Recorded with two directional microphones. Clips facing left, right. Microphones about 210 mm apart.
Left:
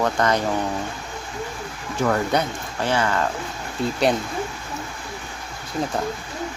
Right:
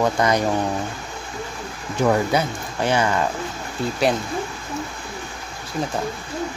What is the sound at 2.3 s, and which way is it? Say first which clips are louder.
Speech: right 1 dB; 5° right (ahead or behind).